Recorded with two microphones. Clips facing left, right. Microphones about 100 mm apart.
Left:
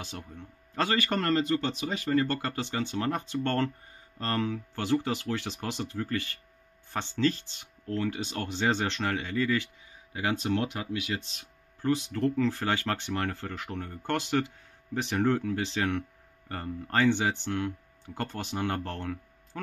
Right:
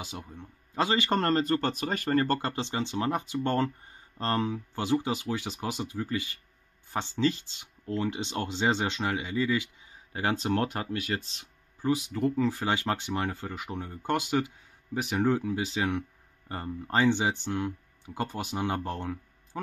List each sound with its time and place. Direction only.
0.0 s speech: 10° right (ahead or behind); by 2.3 s 50° right (ahead or behind)
2.3 s speech: 25° right (ahead or behind)
10.1 s speech: 35° right (ahead or behind)
10.5 s speech: 45° right (ahead or behind)
11.8 s speech: 10° right (ahead or behind)